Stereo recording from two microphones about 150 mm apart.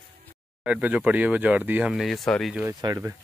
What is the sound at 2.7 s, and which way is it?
Speech, 30° right (ahead or behind).